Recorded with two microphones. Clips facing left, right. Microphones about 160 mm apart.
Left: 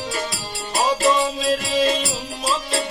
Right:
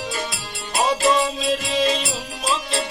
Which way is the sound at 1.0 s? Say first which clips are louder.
Even; centre (ahead or behind).